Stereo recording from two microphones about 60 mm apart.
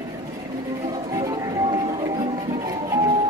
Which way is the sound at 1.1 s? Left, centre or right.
Right.